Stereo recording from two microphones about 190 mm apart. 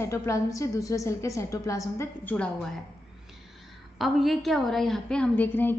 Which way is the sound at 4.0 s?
Centre (ahead or behind).